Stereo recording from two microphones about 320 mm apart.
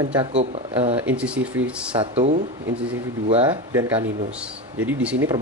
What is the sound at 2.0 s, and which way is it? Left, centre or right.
Speech, centre.